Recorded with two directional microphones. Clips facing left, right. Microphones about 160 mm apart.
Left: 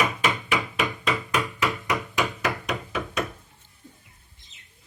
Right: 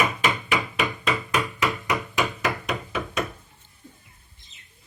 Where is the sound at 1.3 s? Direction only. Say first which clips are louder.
Right 1 dB; 10° right (ahead or behind).